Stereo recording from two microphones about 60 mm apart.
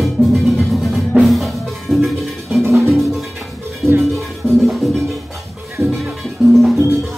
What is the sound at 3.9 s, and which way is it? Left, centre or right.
Music, right.